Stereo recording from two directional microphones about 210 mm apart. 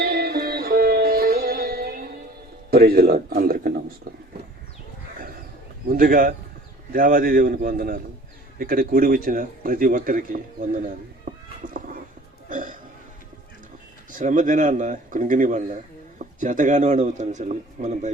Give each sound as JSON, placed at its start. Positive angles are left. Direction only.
{"t": 0.0, "sound": "sitar", "side_deg": -45}
{"t": 2.6, "sound": "a man's voice", "side_deg": -45}
{"t": 5.9, "sound": "a man's voice", "side_deg": -45}
{"t": 11.3, "sound": "a sound", "side_deg": -40}
{"t": 12.5, "sound": "burping", "side_deg": -40}
{"t": 14.1, "sound": "speech", "side_deg": -40}